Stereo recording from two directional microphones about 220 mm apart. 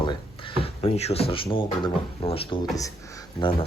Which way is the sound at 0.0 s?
20° left (ahead or behind).